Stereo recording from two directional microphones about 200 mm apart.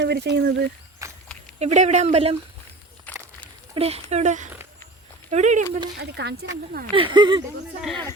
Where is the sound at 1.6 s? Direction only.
35° right (ahead or behind).